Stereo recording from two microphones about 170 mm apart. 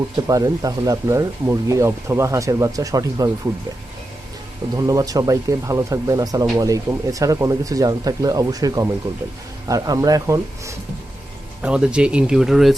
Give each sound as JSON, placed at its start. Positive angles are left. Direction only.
{"t": 0.3, "sound": "speech", "side_deg": -20}
{"t": 4.8, "sound": "speech", "side_deg": -20}
{"t": 11.6, "sound": "speech", "side_deg": -5}